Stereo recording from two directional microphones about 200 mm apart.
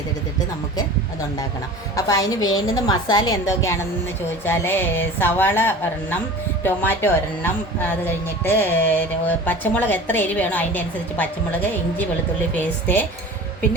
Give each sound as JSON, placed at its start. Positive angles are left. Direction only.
{"t": 2.0, "sound": "a woman's voice", "side_deg": 15}